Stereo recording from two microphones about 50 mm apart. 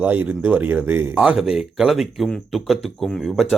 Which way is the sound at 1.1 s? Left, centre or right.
Right.